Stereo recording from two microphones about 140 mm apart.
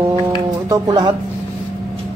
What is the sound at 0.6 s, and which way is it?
Speech, 25° right (ahead or behind).